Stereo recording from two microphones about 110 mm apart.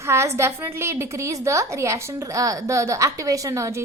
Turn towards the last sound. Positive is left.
turn(degrees=-30)  # may be behind; listen again after turning